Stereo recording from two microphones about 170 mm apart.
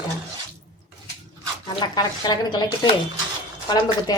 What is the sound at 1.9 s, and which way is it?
Speech, 25° left (ahead or behind).